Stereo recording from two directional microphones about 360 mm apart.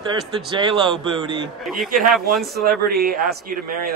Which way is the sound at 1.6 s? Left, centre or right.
Centre.